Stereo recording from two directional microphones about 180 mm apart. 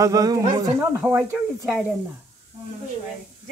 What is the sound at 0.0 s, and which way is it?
Speech, 20° right (ahead or behind).